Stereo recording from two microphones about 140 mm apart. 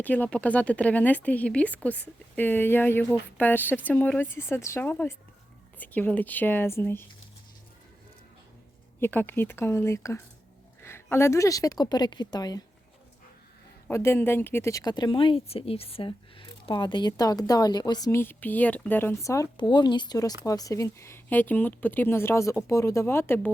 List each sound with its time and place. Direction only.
0.0 s speech: 10° left (ahead or behind)
9.0 s speech: 15° left (ahead or behind)
13.8 s speech: 20° left (ahead or behind)
18.1 s speech: 15° left (ahead or behind)
19.6 s speech: 35° left (ahead or behind); by 23.5 s 15° left (ahead or behind)